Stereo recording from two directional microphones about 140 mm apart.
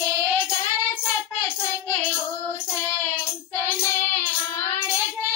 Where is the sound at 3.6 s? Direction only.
15° left (ahead or behind).